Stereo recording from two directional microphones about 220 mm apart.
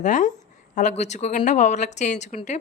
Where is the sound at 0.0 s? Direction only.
35° left (ahead or behind).